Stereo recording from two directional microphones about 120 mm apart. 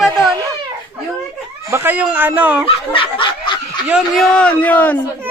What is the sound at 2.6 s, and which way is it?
Snicker, 45° left (ahead or behind).